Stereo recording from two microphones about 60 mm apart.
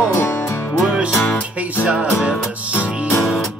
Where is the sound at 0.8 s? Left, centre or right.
Centre.